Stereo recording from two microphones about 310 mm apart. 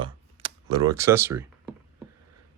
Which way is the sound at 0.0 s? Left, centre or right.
Centre.